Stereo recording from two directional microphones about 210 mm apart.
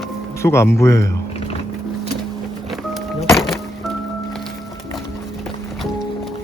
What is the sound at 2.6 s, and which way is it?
Music, centre (ahead or behind).